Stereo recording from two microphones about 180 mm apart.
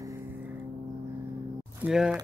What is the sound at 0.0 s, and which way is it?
Vehicle, 15° right (ahead or behind).